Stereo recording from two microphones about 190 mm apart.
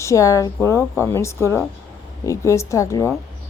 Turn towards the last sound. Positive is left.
turn(degrees=15)  # may be behind; listen again after turning